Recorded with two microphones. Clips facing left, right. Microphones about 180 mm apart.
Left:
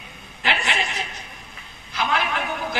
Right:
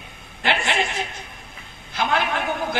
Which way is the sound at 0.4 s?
50° right (ahead or behind).